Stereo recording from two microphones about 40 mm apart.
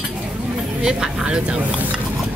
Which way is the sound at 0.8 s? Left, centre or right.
Centre.